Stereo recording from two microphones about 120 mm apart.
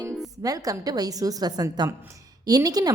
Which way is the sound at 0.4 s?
30° right (ahead or behind).